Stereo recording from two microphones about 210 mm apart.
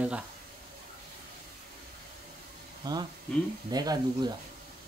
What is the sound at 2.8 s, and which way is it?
Speech, 20° right (ahead or behind).